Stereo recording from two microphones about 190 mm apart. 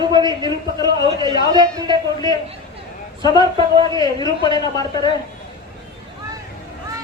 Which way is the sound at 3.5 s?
25° right (ahead or behind).